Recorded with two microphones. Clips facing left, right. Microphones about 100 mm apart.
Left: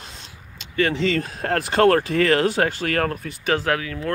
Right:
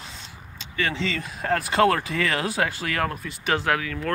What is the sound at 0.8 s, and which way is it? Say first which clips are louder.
Speech: left 6 dB; 50° left (ahead or behind).